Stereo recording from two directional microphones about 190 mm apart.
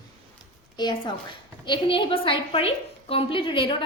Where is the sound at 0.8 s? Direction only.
25° left (ahead or behind).